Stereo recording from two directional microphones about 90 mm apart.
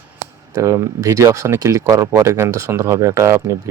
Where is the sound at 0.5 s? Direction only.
35° right (ahead or behind).